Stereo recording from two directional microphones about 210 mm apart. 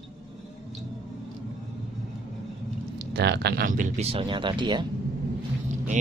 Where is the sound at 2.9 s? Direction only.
55° right (ahead or behind); by 4.8 s 20° right (ahead or behind).